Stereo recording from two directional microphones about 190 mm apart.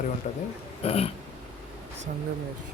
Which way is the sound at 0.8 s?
30° left (ahead or behind).